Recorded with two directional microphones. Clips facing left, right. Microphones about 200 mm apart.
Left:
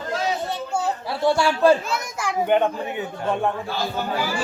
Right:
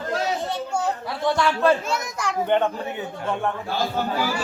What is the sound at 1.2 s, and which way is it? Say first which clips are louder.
Speech: left 3 dB; 30° left (ahead or behind).